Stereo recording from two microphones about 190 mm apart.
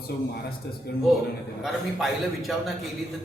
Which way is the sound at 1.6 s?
Centre (ahead or behind).